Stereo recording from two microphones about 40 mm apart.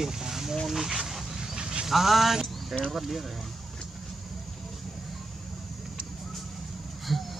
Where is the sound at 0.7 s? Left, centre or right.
Centre.